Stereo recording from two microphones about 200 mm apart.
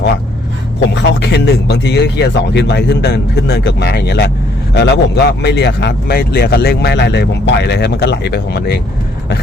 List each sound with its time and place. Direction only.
0.9 s speech: 60° left (ahead or behind)